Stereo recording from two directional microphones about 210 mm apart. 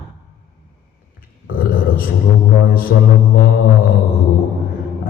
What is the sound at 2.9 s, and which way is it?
Speech, 50° left (ahead or behind).